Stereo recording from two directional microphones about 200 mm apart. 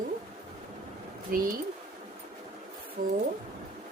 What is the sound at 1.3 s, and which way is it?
Speech, 45° right (ahead or behind).